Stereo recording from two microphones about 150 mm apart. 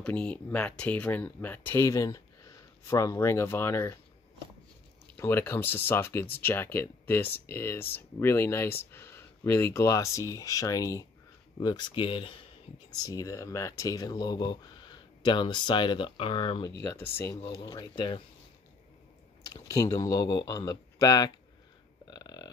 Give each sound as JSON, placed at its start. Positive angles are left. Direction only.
{"t": 0.0, "sound": "speech", "side_deg": 10}
{"t": 5.1, "sound": "speech", "side_deg": 15}
{"t": 12.9, "sound": "speech", "side_deg": 25}
{"t": 16.8, "sound": "speech", "side_deg": 15}
{"t": 19.5, "sound": "speech", "side_deg": 25}
{"t": 22.1, "sound": "burping", "side_deg": 30}